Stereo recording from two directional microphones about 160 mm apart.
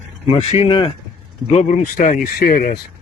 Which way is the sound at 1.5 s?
45° left (ahead or behind).